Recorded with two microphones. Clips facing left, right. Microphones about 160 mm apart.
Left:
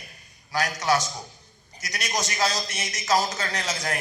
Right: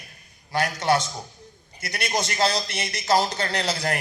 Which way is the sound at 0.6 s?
60° right (ahead or behind).